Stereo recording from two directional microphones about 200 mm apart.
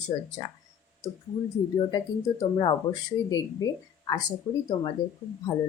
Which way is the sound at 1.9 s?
20° left (ahead or behind).